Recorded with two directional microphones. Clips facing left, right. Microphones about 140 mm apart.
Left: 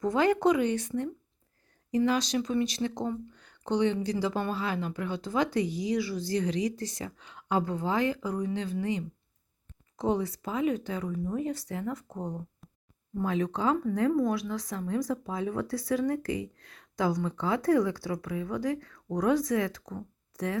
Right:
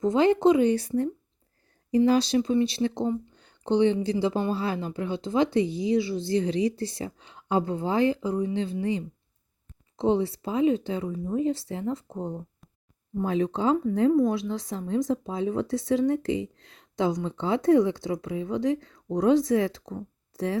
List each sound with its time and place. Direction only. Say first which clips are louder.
0.0 s speech: right 4 dB; 25° right (ahead or behind)